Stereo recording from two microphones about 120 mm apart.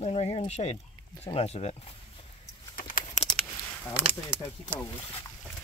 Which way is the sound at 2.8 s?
90° left.